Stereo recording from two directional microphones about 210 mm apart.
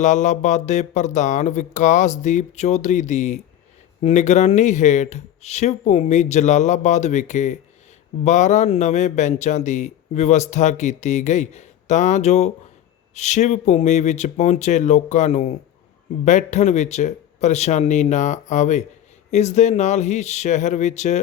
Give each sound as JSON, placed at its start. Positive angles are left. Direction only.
{"t": 0.0, "sound": "a man's voice", "side_deg": 35}